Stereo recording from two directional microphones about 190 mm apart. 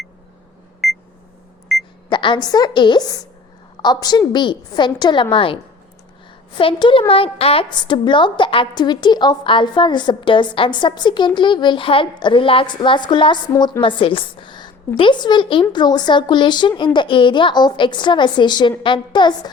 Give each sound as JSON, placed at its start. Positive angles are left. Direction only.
{"t": 0.8, "sound": "beep", "side_deg": 0}
{"t": 1.7, "sound": "a sound", "side_deg": 0}
{"t": 2.0, "sound": "a woman's voice", "side_deg": 25}
{"t": 6.6, "sound": "a woman's voice", "side_deg": 25}